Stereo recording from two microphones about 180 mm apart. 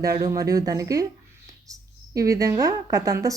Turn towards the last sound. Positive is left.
turn(degrees=-20)  # may be behind; listen again after turning